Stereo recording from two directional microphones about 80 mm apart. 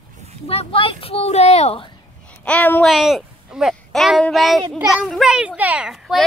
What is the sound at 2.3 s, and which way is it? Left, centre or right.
Speech, centre.